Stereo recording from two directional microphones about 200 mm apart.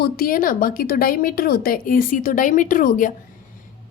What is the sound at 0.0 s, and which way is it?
A woman's voice, 45° left (ahead or behind).